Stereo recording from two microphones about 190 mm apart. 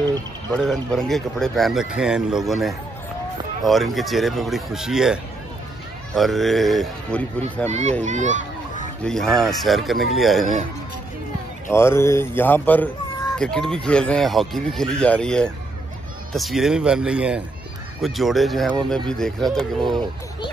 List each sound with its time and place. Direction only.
0.6 s speech: centre (ahead or behind)
7.6 s speech: 35° right (ahead or behind)
9.0 s speech: centre (ahead or behind)
11.7 s speech: 15° left (ahead or behind)